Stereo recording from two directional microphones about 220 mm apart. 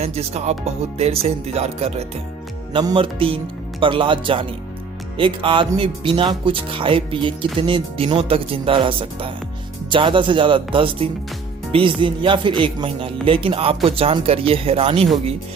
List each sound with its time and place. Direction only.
0.0 s speech: 30° right (ahead or behind)